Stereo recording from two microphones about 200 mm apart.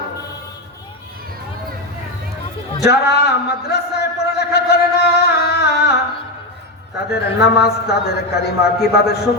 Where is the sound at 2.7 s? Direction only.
55° left (ahead or behind).